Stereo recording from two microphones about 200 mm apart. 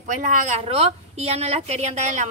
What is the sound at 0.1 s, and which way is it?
A woman's voice, 40° right (ahead or behind).